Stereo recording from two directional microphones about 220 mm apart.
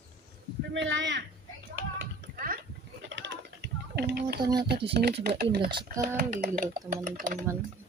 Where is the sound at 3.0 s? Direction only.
55° right (ahead or behind).